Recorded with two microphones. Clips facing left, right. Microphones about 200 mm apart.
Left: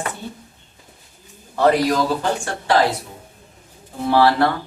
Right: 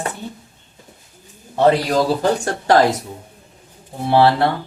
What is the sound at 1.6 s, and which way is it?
Speech, 35° right (ahead or behind).